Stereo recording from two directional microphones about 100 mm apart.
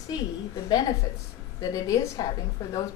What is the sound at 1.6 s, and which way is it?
Speech, 40° left (ahead or behind).